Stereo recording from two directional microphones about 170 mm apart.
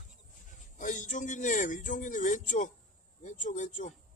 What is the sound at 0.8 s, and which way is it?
A man's voice, 50° left (ahead or behind).